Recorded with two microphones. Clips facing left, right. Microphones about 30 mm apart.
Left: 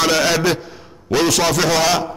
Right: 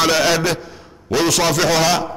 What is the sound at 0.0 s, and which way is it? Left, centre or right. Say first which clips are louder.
A man's voice: even; centre.